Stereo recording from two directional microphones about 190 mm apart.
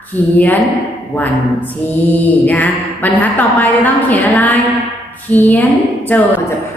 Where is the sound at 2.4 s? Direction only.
10° left (ahead or behind).